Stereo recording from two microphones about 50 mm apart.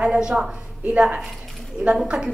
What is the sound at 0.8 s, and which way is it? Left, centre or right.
A man's voice, right.